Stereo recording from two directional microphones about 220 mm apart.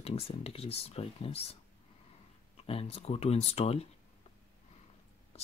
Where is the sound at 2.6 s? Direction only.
25° left (ahead or behind).